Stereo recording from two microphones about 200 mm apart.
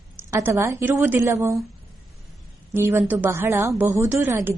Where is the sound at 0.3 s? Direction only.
15° right (ahead or behind).